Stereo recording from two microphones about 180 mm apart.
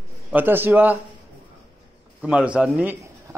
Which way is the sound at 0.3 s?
10° right (ahead or behind).